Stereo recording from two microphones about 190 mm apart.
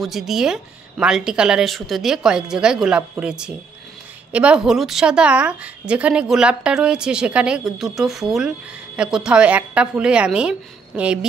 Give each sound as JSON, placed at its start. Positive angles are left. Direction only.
{"t": 0.0, "sound": "a woman's voice", "side_deg": 0}